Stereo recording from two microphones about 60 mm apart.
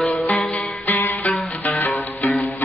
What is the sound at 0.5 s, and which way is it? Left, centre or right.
Music, left.